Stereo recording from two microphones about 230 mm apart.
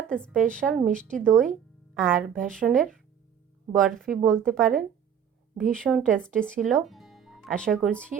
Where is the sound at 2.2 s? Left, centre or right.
Right.